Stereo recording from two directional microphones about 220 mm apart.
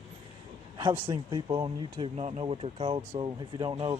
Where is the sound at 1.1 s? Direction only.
20° right (ahead or behind).